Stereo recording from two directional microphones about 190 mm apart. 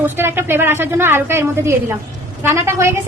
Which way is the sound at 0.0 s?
10° right (ahead or behind).